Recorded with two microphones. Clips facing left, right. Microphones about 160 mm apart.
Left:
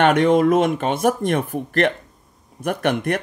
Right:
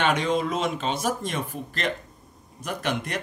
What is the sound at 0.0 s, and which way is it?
Speech, 60° left (ahead or behind).